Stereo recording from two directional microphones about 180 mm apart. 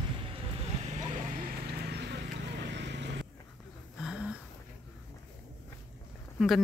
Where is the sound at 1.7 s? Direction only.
65° right (ahead or behind).